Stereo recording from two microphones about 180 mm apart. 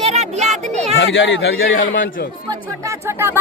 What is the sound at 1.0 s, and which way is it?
A man's voice, 80° left.